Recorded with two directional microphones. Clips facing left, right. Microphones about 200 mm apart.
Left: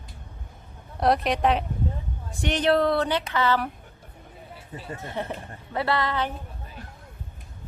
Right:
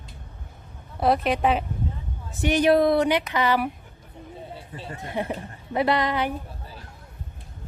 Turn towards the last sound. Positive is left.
turn(degrees=-15)  # may be behind; listen again after turning